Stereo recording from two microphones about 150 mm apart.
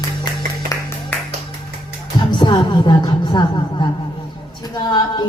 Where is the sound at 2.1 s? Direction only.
30° left (ahead or behind).